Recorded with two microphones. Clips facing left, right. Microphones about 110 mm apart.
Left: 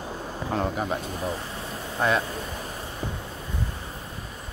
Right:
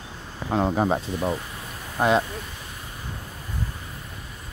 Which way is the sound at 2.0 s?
20° right (ahead or behind).